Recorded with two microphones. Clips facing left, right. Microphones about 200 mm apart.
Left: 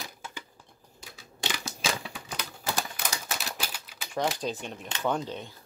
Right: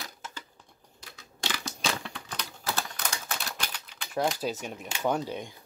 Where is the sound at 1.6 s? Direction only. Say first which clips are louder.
Right 1 dB; 5° left (ahead or behind).